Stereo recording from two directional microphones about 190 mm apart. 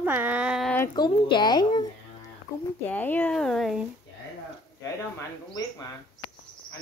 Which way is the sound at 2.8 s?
10° left (ahead or behind).